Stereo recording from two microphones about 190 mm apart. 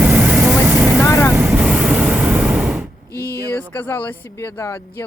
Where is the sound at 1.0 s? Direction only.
15° left (ahead or behind).